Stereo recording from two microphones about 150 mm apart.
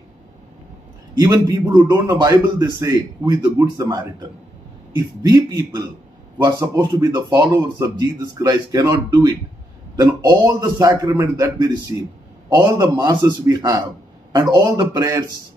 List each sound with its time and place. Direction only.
1.2 s speech: 25° right (ahead or behind)
7.1 s speech: 25° right (ahead or behind)